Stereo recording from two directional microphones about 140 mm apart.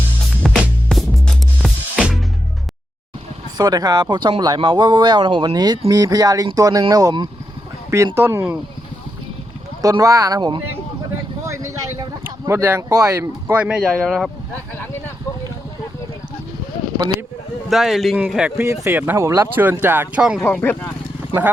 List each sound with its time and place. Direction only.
0.4 s music: centre (ahead or behind)
3.6 s speech: 30° right (ahead or behind)
9.8 s speech: 25° right (ahead or behind)
13.6 s speech: 5° right (ahead or behind)
17.7 s speech: centre (ahead or behind)
20.4 s speech: 15° left (ahead or behind)